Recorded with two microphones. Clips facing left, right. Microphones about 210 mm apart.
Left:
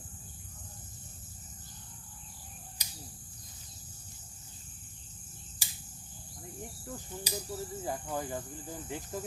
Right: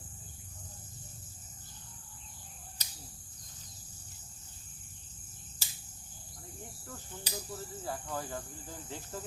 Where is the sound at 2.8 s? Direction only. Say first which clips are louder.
Left 3 dB; 15° left (ahead or behind).